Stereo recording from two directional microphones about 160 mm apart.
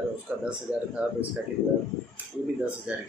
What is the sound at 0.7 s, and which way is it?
Speech, 25° left (ahead or behind).